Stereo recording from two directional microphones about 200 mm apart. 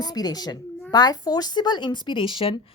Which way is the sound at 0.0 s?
20° left (ahead or behind).